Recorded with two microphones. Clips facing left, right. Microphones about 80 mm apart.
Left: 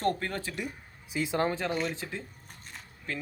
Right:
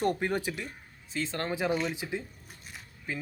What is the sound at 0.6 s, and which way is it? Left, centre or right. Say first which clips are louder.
Speech: left 3 dB; centre.